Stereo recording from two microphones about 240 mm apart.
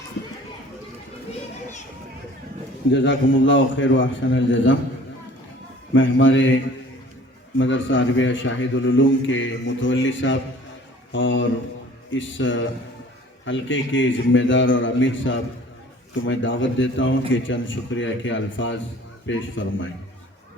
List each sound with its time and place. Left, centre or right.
2.9 s a man's voice: left
5.9 s a man's voice: left
7.6 s a man's voice: left